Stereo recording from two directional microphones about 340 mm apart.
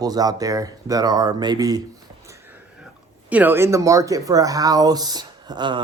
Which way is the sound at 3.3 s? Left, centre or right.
Centre.